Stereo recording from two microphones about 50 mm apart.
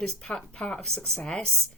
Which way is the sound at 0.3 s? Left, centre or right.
Left.